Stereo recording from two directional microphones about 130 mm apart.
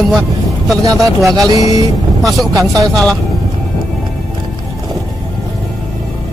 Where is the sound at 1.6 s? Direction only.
25° right (ahead or behind).